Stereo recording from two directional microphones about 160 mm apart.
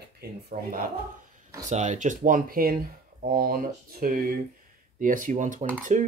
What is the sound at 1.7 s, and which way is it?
Speech, 50° right (ahead or behind).